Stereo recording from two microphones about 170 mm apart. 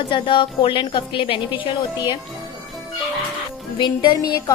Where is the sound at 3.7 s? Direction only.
25° left (ahead or behind).